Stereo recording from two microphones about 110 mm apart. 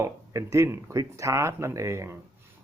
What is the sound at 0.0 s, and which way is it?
Speech, 25° right (ahead or behind).